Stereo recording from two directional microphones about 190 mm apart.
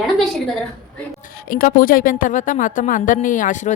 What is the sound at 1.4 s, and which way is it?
A woman's voice, 45° left (ahead or behind).